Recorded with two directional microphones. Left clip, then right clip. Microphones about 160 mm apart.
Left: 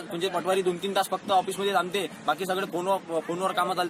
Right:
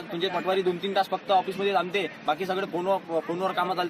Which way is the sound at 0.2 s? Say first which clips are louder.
Even; 5° right (ahead or behind).